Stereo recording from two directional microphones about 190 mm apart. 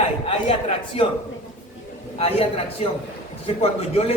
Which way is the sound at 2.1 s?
30° left (ahead or behind).